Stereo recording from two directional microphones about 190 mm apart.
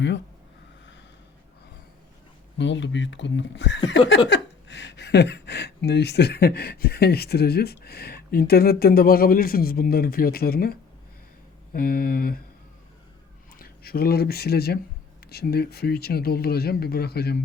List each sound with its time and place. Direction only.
2.6 s speech: 70° left (ahead or behind); by 12.4 s 50° left (ahead or behind)
13.6 s speech: 55° left (ahead or behind)